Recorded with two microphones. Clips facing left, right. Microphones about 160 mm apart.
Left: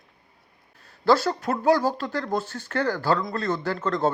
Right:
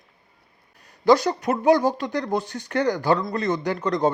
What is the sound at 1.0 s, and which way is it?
A man's voice, 15° right (ahead or behind).